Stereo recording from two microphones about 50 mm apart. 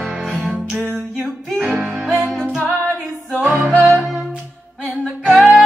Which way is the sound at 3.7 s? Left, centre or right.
Centre.